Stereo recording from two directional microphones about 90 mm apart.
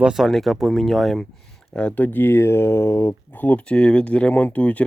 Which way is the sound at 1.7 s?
15° left (ahead or behind).